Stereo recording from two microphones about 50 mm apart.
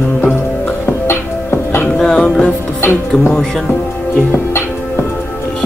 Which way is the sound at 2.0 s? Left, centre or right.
Centre.